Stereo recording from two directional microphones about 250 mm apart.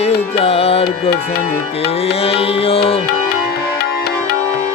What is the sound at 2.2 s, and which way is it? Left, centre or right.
Music, left.